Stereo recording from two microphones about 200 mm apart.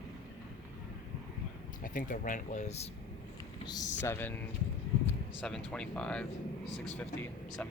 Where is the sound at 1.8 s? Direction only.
40° left (ahead or behind).